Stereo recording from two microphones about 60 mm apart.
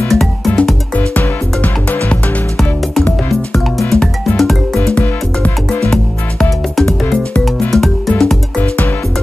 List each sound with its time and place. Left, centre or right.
0.1 s music: centre
0.9 s music: left
3.3 s music: centre
4.9 s music: left
5.8 s music: centre